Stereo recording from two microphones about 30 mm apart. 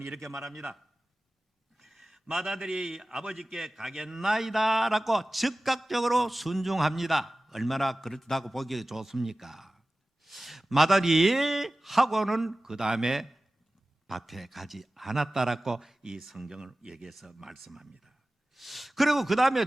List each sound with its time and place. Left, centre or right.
0.3 s a man's voice: centre
1.8 s a sound: centre
2.7 s a man's voice: centre
12.6 s a man's voice: centre
14.1 s a man's voice: centre
16.5 s speech: centre
17.2 s a man's voice: centre